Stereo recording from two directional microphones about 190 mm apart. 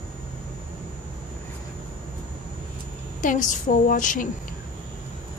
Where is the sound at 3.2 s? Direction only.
40° left (ahead or behind).